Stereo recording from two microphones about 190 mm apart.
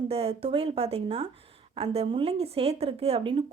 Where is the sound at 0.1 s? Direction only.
30° right (ahead or behind).